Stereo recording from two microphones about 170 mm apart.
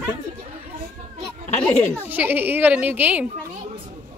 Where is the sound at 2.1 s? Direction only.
10° right (ahead or behind).